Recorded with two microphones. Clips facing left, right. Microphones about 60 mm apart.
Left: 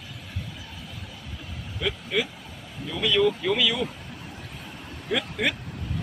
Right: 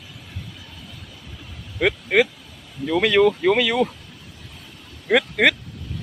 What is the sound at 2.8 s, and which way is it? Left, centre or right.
Speech, right.